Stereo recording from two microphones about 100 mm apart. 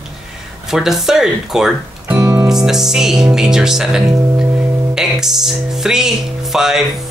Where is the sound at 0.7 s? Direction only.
5° right (ahead or behind).